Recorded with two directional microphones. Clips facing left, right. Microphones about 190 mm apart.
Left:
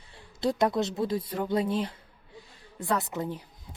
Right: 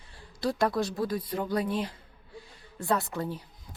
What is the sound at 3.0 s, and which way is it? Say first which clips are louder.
Speech: left 1 dB; 20° left (ahead or behind).